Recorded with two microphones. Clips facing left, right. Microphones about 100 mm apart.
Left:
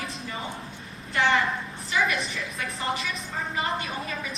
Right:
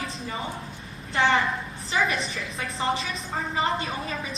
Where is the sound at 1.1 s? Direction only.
30° right (ahead or behind).